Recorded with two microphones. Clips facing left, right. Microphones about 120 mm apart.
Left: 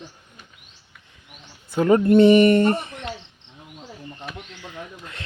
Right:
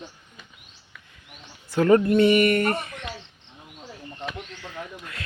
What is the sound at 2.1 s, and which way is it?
Speech, 30° left (ahead or behind).